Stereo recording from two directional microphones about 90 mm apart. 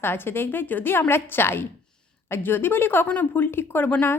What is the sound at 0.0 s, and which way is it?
Speech, 25° left (ahead or behind).